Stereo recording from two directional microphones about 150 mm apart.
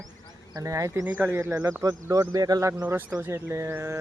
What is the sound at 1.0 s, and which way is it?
Speech, 10° right (ahead or behind).